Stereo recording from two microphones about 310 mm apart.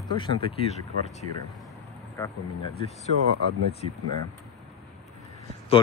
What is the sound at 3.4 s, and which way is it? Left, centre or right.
Speech, right.